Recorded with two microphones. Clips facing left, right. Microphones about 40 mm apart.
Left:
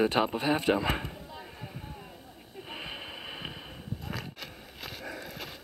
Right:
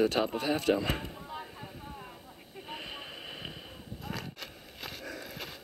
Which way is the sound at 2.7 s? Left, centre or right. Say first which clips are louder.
Left 2 dB; centre.